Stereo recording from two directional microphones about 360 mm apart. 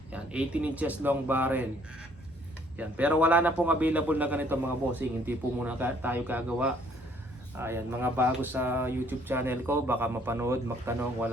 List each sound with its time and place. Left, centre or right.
0.1 s speech: centre
2.7 s speech: centre